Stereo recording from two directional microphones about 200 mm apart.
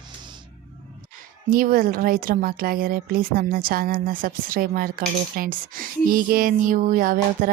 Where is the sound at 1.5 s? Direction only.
45° right (ahead or behind).